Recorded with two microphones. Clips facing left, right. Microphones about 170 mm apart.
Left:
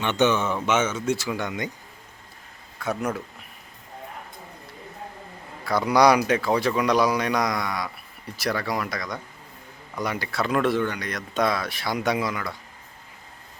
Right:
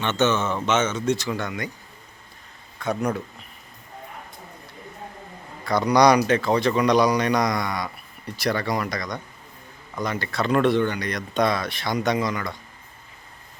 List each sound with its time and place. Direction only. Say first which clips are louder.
0.0 s speech: even; 15° left (ahead or behind)
1.5 s speech: left 1 dB; 20° left (ahead or behind)
2.7 s speech: right 2 dB; 5° left (ahead or behind)
5.6 s speech: right 1 dB; 5° left (ahead or behind)